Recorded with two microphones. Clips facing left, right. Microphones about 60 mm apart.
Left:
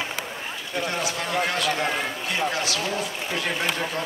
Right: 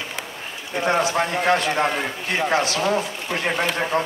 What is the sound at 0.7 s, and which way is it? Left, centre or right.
A man's voice, right.